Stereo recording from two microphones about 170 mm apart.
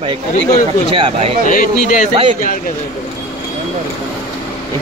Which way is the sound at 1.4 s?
50° left (ahead or behind).